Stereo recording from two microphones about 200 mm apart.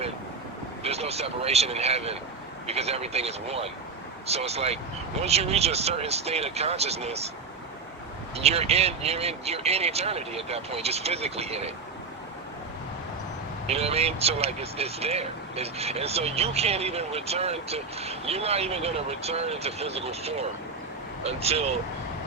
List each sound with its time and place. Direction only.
0.8 s speech: 30° right (ahead or behind)
8.4 s speech: 30° right (ahead or behind)
13.7 s speech: 30° right (ahead or behind)